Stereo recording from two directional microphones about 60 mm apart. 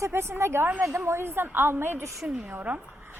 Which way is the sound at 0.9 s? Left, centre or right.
Right.